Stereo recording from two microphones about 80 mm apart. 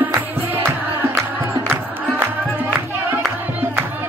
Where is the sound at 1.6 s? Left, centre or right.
Right.